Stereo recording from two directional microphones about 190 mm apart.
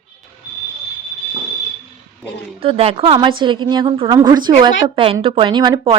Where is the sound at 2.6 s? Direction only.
30° right (ahead or behind).